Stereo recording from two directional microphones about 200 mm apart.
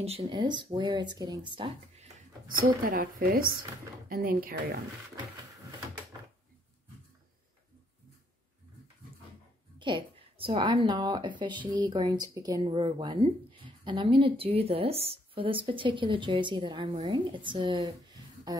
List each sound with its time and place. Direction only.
0.0 s a woman's voice: 25° right (ahead or behind); by 4.8 s 45° right (ahead or behind)
9.8 s a woman's voice: 25° right (ahead or behind)